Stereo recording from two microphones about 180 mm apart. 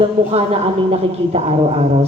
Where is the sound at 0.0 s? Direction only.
35° right (ahead or behind).